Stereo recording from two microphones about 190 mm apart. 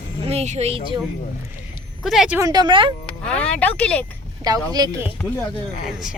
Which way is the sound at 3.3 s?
5° left (ahead or behind).